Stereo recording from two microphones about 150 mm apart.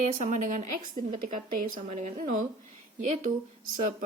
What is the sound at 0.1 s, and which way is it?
Speech, 55° right (ahead or behind).